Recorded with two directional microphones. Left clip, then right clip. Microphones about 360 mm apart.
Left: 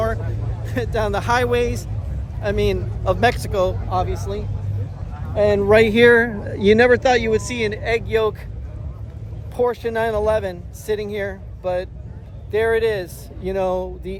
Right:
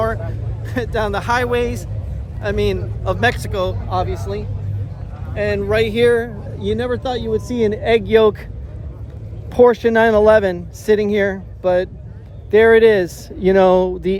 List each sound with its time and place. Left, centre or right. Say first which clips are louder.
0.6 s a man's voice: right 2 dB; centre
5.3 s speech: left 4 dB; centre
7.6 s speech: right 6 dB; centre
9.5 s speech: right 9 dB; right